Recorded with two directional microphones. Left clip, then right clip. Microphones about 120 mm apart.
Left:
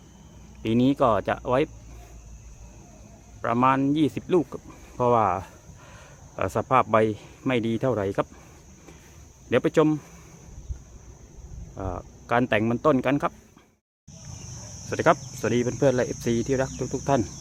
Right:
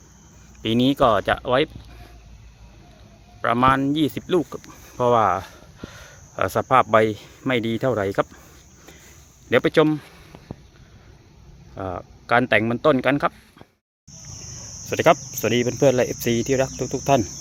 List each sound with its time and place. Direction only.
0.6 s cricket: 15° right (ahead or behind)
3.4 s speech: 15° right (ahead or behind)
9.5 s speech: 20° right (ahead or behind)
11.7 s cricket: 15° right (ahead or behind)
14.8 s cricket: 15° right (ahead or behind)